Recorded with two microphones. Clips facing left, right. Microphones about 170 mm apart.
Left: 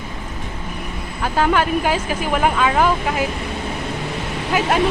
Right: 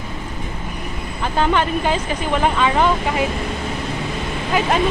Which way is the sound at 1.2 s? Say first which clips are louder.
Left 1 dB; 5° left (ahead or behind).